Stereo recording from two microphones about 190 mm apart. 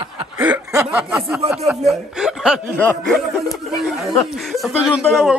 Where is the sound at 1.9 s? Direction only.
5° right (ahead or behind).